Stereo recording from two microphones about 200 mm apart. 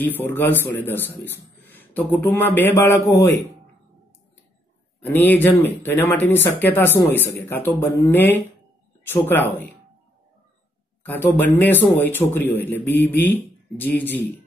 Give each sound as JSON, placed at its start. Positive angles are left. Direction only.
{"t": 0.0, "sound": "speech", "side_deg": 10}
{"t": 5.0, "sound": "speech", "side_deg": 10}
{"t": 11.1, "sound": "speech", "side_deg": 10}